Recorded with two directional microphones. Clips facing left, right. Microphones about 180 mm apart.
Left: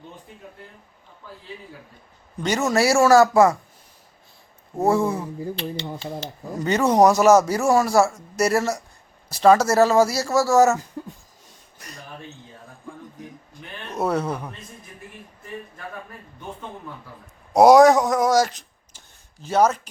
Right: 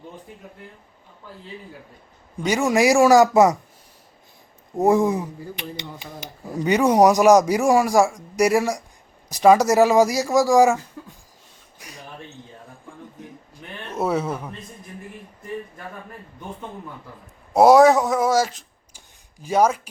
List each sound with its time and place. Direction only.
2.4 s speech: 10° right (ahead or behind)
4.8 s speech: 15° right (ahead or behind)
11.0 s speech: 30° left (ahead or behind)
11.8 s a sound: 10° right (ahead or behind)
13.9 s speech: 5° right (ahead or behind)
17.5 s speech: centre (ahead or behind)
18.9 s a sound: 10° right (ahead or behind)